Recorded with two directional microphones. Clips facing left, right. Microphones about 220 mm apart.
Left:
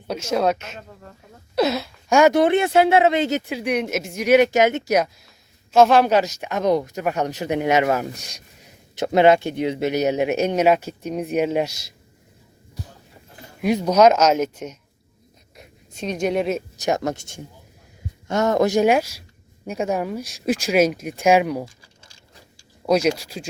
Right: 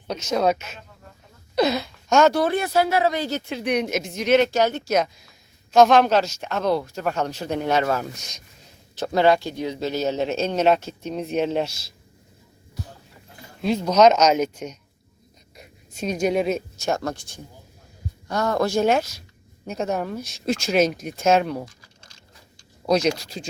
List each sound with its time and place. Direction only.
0.1 s speech: 5° left (ahead or behind); by 3.4 s 20° left (ahead or behind)
3.5 s speech: 5° left (ahead or behind)
13.6 s speech: 15° left (ahead or behind)
16.8 s speech: 20° left (ahead or behind)
22.9 s speech: 5° left (ahead or behind)